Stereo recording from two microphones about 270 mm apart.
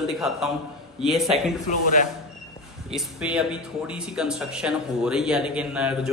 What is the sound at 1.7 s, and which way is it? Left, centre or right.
Speech, left.